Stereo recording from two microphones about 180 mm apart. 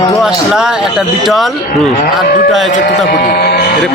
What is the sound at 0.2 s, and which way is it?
Speech, 5° right (ahead or behind).